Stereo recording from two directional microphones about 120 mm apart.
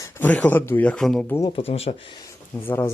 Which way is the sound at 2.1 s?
30° left (ahead or behind).